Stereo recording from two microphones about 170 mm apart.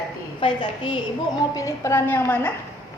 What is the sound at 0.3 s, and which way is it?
Speech, 30° left (ahead or behind).